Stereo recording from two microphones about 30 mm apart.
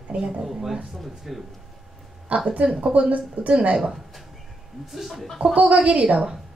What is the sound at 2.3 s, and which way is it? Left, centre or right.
Speech, right.